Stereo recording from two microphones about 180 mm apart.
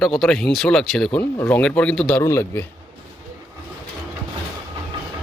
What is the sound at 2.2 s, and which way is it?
Speech, 15° left (ahead or behind).